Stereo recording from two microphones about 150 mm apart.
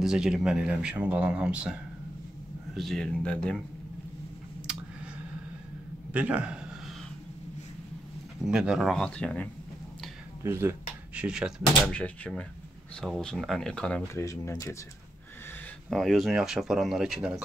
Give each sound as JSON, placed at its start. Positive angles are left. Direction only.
{"t": 0.0, "sound": "speech", "side_deg": -5}
{"t": 6.1, "sound": "a man's voice", "side_deg": -10}
{"t": 8.5, "sound": "speech", "side_deg": -5}
{"t": 10.4, "sound": "a sound", "side_deg": -15}
{"t": 11.2, "sound": "speech", "side_deg": -5}
{"t": 11.9, "sound": "speech", "side_deg": 5}
{"t": 14.1, "sound": "speech", "side_deg": 20}
{"t": 15.9, "sound": "speech", "side_deg": 0}